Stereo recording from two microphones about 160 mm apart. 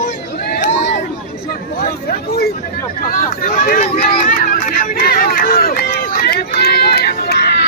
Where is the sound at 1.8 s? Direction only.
70° left (ahead or behind).